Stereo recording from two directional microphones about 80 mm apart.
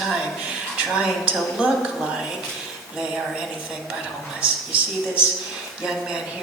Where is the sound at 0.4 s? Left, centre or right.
Centre.